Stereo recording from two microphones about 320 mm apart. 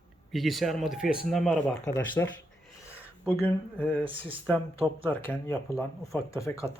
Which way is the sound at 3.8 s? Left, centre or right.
Centre.